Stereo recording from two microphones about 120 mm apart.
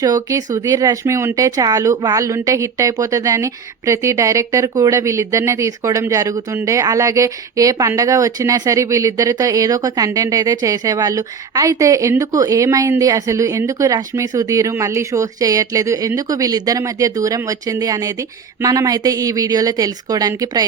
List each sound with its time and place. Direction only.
0.0 s speech: 30° right (ahead or behind)